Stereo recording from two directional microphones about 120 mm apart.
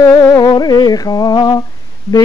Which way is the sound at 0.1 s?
30° left (ahead or behind).